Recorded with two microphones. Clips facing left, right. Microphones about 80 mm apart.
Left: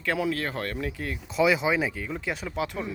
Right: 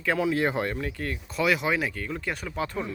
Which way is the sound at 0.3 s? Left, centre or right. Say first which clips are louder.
Right 5 dB; centre.